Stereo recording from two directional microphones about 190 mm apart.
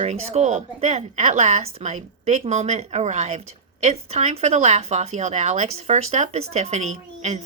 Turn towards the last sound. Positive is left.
turn(degrees=-35)  # may be behind; listen again after turning